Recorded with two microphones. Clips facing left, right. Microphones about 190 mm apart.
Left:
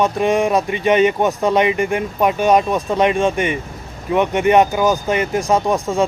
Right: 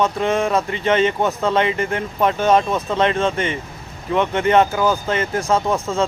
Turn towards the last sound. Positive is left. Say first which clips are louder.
# left 2 dB
turn(degrees=15)  # may be behind; listen again after turning